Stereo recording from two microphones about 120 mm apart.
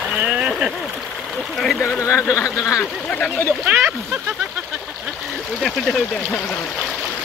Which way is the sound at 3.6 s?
10° right (ahead or behind).